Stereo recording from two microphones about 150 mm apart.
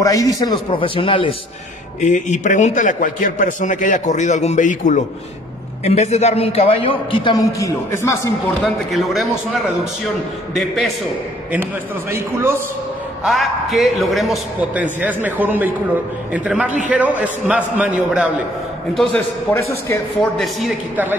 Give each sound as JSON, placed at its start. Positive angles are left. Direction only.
{"t": 0.0, "sound": "a man's voice", "side_deg": 25}
{"t": 2.0, "sound": "a man's voice", "side_deg": 55}
{"t": 7.5, "sound": "a man's voice", "side_deg": 20}
{"t": 8.6, "sound": "a man's voice", "side_deg": 0}
{"t": 12.1, "sound": "a man's voice", "side_deg": -15}
{"t": 13.2, "sound": "a man's voice", "side_deg": 0}
{"t": 18.9, "sound": "a man's voice", "side_deg": 10}
{"t": 20.9, "sound": "a man's voice", "side_deg": -10}